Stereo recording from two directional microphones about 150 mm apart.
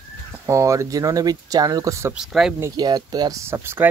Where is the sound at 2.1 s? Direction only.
5° right (ahead or behind).